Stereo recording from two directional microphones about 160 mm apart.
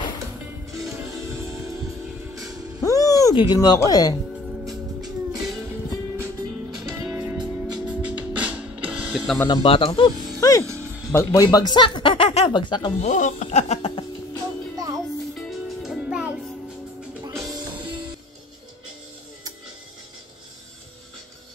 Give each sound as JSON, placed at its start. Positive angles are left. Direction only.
{"t": 0.7, "sound": "music", "side_deg": -20}
{"t": 2.8, "sound": "music", "side_deg": 20}
{"t": 4.6, "sound": "music", "side_deg": 0}
{"t": 6.8, "sound": "music", "side_deg": -20}
{"t": 7.8, "sound": "music", "side_deg": -10}
{"t": 9.5, "sound": "speech", "side_deg": 35}
{"t": 10.6, "sound": "music", "side_deg": -20}
{"t": 11.1, "sound": "a man's voice", "side_deg": 20}
{"t": 13.0, "sound": "music", "side_deg": 50}
{"t": 15.3, "sound": "music", "side_deg": 0}
{"t": 17.2, "sound": "music", "side_deg": -20}